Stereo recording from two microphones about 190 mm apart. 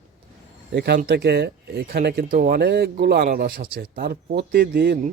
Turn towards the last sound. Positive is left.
turn(degrees=-55)  # may be behind; listen again after turning